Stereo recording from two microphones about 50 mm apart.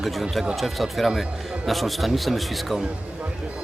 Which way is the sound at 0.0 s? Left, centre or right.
Centre.